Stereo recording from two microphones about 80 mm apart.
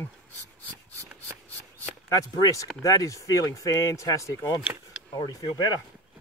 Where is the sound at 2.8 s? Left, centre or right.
Left.